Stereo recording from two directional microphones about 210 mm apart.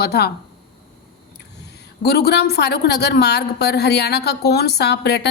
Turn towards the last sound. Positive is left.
turn(degrees=50)  # may be behind; listen again after turning